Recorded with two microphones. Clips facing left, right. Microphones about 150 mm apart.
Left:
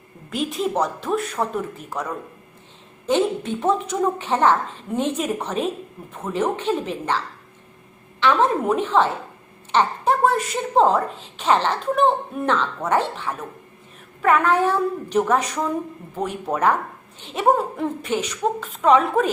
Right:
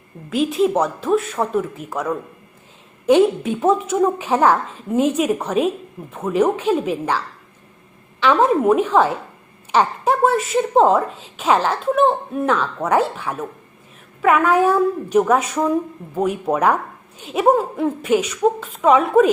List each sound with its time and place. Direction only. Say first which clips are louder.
0.3 s a woman's voice: right 7 dB; centre (ahead or behind)
3.1 s a woman's voice: right 6 dB; 10° right (ahead or behind)
8.2 s a woman's voice: right 3 dB; 15° right (ahead or behind)